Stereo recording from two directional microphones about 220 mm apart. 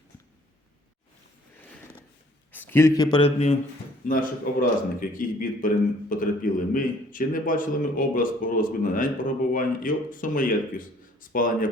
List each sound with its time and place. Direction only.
2.5 s a man's voice: 10° left (ahead or behind); by 3.6 s 30° left (ahead or behind)
4.5 s a man's voice: 40° left (ahead or behind)